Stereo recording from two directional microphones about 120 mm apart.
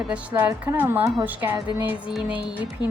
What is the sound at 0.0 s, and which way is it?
A woman's voice, 10° right (ahead or behind).